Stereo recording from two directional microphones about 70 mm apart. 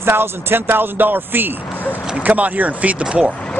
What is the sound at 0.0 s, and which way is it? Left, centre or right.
Speech, right.